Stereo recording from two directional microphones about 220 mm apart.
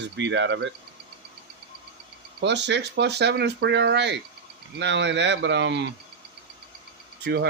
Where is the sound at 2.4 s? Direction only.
50° right (ahead or behind).